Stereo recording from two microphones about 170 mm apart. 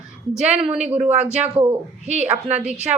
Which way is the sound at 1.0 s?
40° right (ahead or behind).